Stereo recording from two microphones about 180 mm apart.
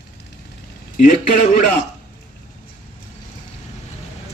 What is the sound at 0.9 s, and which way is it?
Speech, 45° left (ahead or behind).